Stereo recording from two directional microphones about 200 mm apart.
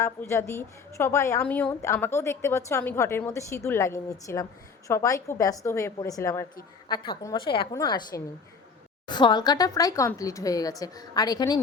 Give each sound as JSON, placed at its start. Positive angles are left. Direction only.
{"t": 0.0, "sound": "a woman's voice", "side_deg": 15}